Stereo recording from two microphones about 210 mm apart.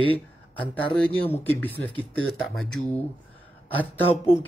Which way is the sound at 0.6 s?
5° left (ahead or behind).